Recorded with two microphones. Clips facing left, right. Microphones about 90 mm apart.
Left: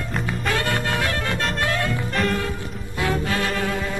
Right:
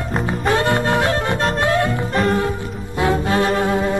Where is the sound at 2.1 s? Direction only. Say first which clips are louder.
Right 5 dB; 40° right (ahead or behind).